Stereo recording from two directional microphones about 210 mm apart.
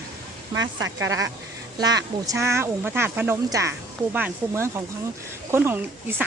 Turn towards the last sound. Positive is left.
turn(degrees=-10)  # may be behind; listen again after turning